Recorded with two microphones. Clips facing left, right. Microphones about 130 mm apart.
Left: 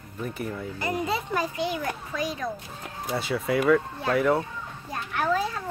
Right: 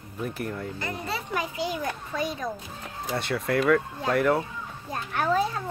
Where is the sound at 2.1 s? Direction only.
25° right (ahead or behind).